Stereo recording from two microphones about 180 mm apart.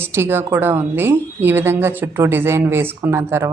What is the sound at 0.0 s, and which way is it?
Speech, 15° right (ahead or behind).